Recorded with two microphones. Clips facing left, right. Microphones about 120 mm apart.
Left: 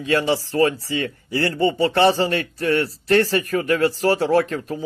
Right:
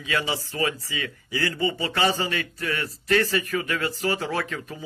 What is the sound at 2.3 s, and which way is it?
Speech, 40° left (ahead or behind).